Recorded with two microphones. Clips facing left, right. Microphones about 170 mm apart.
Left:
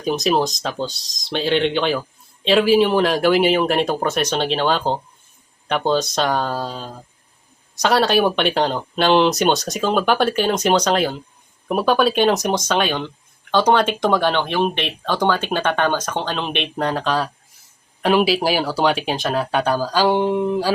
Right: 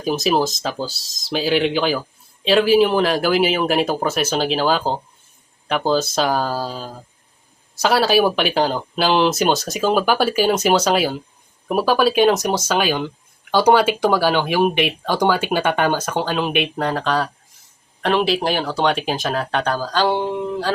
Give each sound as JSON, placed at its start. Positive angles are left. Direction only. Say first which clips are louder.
{"t": 0.0, "sound": "speech", "louder": "even", "side_deg": -5}